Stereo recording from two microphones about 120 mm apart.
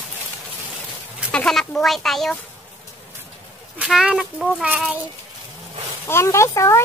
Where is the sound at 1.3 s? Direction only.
5° left (ahead or behind).